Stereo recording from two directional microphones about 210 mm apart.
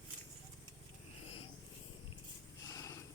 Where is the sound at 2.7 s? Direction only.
15° left (ahead or behind).